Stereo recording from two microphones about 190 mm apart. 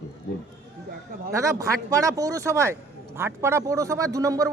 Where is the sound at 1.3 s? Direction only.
15° right (ahead or behind).